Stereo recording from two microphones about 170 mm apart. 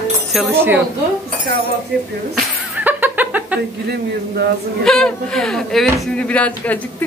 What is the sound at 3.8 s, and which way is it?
Speech, 70° right (ahead or behind).